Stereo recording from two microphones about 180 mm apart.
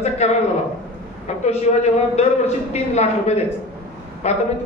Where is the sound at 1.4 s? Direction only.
35° left (ahead or behind).